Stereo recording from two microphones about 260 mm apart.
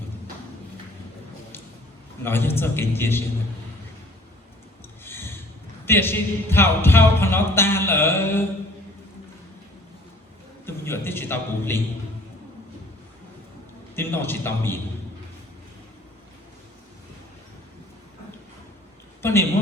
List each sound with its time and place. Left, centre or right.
2.2 s speech: centre
5.0 s a sound: centre
5.8 s speech: centre
10.7 s a man's voice: centre
13.9 s speech: centre
19.2 s a man's voice: centre